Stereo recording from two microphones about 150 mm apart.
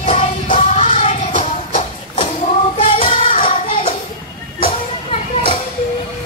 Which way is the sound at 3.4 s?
35° left (ahead or behind).